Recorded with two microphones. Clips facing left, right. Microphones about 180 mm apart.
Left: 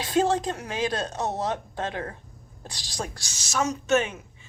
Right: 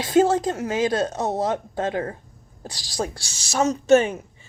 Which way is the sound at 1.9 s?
35° right (ahead or behind).